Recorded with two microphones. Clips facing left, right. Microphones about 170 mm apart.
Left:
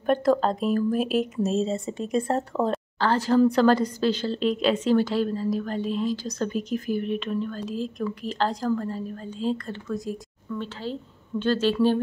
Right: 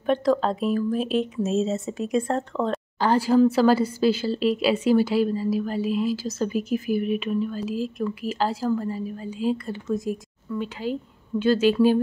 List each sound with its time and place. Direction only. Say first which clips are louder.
0.0 s speech: even; centre (ahead or behind)
3.0 s a woman's voice: right 2 dB; 10° right (ahead or behind)